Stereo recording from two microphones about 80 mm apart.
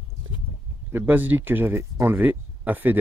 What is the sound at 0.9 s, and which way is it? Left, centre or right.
Speech, right.